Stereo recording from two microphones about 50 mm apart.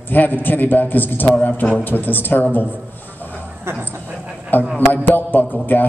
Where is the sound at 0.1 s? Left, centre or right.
Left.